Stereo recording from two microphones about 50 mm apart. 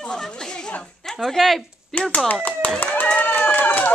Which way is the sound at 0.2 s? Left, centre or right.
Centre.